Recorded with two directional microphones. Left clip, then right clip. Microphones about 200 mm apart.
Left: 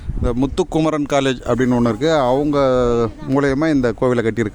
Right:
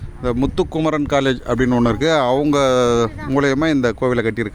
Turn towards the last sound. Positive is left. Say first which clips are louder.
# left 1 dB
turn(degrees=15)  # may be behind; listen again after turning